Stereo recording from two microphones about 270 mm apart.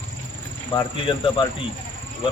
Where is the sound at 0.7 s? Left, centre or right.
Centre.